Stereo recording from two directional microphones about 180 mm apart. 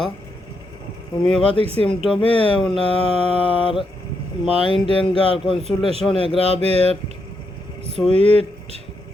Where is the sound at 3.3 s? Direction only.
30° left (ahead or behind).